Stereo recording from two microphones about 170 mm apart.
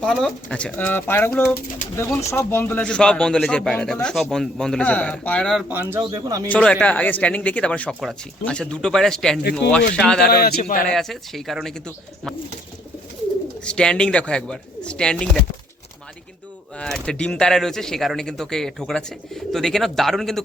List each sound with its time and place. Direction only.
0.0 s speech: 5° left (ahead or behind)
6.0 s speech: 20° right (ahead or behind)
6.5 s speech: 5° left (ahead or behind)
10.2 s a man's voice: 65° left (ahead or behind)
10.8 s speech: centre (ahead or behind)
13.7 s speech: 5° left (ahead or behind)
16.7 s speech: 5° left (ahead or behind)